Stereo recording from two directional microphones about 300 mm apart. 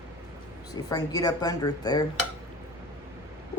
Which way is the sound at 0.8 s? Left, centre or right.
Centre.